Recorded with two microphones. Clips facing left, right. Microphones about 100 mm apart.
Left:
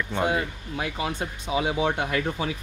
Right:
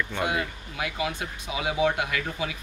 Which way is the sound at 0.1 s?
30° left (ahead or behind).